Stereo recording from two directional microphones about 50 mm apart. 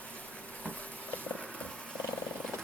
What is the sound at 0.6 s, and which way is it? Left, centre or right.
Insect, left.